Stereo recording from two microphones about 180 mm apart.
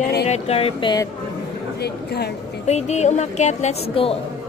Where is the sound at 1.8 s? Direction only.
65° left (ahead or behind).